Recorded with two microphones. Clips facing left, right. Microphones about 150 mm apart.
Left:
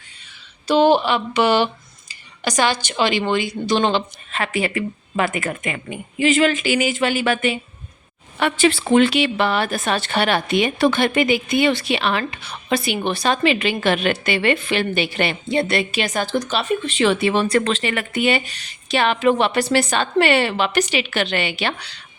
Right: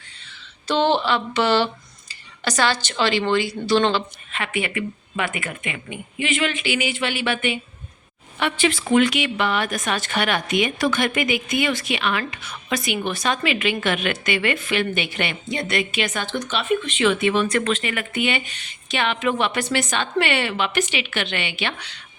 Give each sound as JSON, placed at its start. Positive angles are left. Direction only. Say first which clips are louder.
{"t": 0.7, "sound": "speech", "louder": "left 4 dB", "side_deg": 10}
{"t": 4.3, "sound": "a woman's voice", "louder": "left 4 dB", "side_deg": 35}